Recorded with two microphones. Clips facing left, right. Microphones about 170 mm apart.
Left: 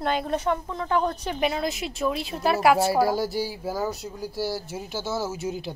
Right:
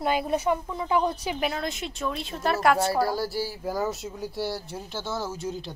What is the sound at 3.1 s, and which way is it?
Speech, 20° left (ahead or behind).